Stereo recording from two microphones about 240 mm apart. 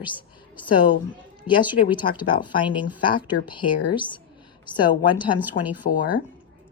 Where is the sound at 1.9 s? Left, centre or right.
Centre.